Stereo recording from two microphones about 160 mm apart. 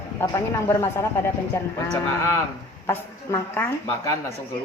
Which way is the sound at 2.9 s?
15° left (ahead or behind).